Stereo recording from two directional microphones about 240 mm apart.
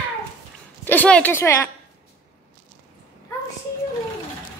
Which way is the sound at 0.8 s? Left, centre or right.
Centre.